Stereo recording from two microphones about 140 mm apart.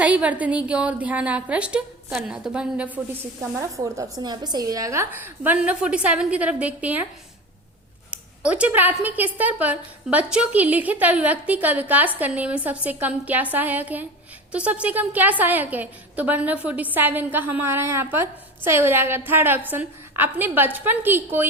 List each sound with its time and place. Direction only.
0.0 s speech: 10° right (ahead or behind)
3.5 s speech: 20° right (ahead or behind)
8.1 s speech: 10° right (ahead or behind)